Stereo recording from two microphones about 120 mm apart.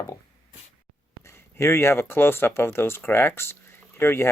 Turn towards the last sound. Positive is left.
turn(degrees=20)  # may be behind; listen again after turning